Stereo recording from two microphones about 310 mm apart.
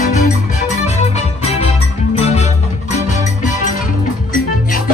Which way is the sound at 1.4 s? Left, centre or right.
Centre.